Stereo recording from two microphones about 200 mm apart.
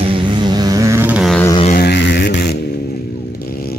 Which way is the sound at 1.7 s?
55° left (ahead or behind).